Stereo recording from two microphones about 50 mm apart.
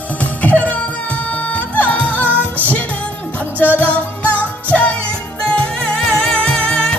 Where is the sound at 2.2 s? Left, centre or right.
Right.